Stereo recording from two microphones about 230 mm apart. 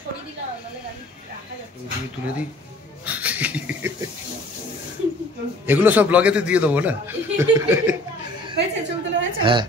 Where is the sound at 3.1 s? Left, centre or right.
Centre.